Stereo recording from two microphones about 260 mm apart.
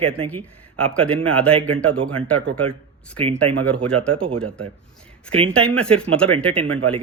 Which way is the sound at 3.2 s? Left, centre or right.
Right.